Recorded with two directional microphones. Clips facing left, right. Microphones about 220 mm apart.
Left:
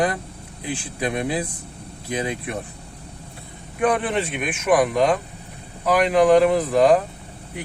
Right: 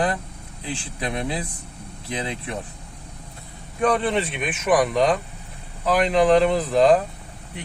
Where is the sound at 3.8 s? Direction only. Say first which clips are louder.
Even; 10° left (ahead or behind).